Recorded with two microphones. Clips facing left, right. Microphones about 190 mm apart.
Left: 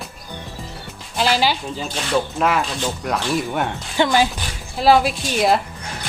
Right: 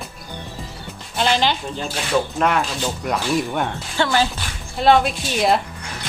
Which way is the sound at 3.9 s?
15° left (ahead or behind).